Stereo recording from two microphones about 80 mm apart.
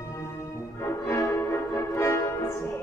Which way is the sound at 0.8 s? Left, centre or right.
Left.